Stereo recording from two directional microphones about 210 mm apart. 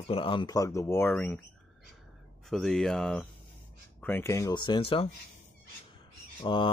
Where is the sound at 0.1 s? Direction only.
25° left (ahead or behind); by 1.4 s 5° left (ahead or behind).